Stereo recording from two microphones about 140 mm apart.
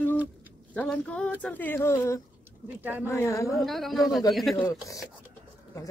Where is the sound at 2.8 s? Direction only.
15° right (ahead or behind).